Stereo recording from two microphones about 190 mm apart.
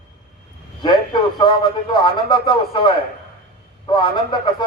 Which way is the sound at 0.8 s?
25° left (ahead or behind).